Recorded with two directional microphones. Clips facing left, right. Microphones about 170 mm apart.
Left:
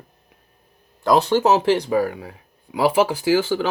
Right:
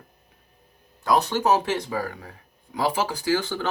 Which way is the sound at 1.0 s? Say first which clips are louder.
Left 5 dB; 90° left.